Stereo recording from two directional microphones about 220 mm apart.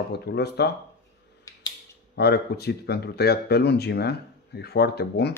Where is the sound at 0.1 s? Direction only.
50° left (ahead or behind).